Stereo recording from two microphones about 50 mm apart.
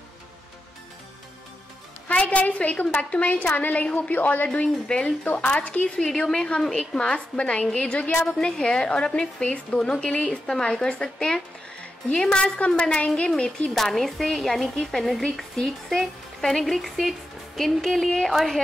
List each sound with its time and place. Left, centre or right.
2.0 s a woman's voice: left
4.8 s a woman's voice: left
6.3 s speech: centre
7.3 s a woman's voice: left
13.7 s speech: centre